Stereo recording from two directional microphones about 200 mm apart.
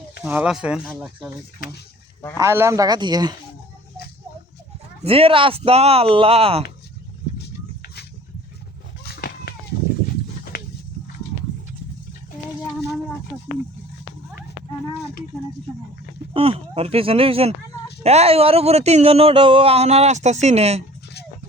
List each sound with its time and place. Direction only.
0.3 s speech: 5° right (ahead or behind)
2.4 s speech: 15° right (ahead or behind)
5.0 s speech: 30° right (ahead or behind)
9.0 s a sound: 50° left (ahead or behind)
16.3 s a sound: 30° right (ahead or behind)
18.0 s speech: 30° right (ahead or behind)